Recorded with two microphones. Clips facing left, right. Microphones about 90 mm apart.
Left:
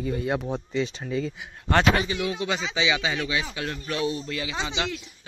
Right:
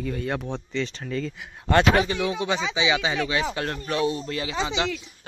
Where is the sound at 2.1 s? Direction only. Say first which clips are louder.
Right 2 dB; 25° right (ahead or behind).